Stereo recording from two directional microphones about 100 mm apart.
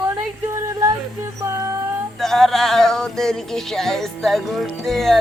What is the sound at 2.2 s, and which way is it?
Music, 5° left (ahead or behind).